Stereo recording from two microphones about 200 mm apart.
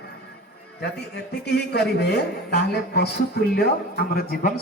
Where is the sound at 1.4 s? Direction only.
55° left (ahead or behind).